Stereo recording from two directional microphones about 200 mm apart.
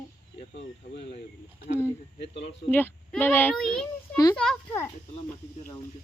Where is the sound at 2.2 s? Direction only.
60° left (ahead or behind).